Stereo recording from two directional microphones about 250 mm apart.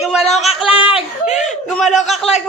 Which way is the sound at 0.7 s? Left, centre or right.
Left.